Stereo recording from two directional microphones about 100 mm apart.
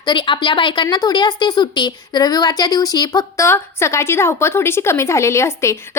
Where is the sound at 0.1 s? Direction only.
55° left (ahead or behind).